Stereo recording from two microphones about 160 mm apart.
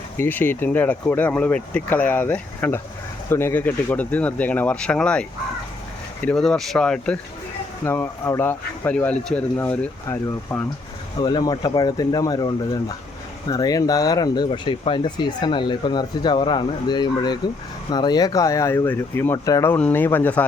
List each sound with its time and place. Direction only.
0.2 s speech: 10° left (ahead or behind)
6.2 s speech: 5° left (ahead or behind)